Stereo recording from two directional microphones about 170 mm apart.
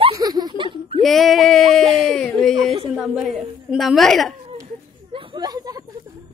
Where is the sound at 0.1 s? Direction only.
20° right (ahead or behind).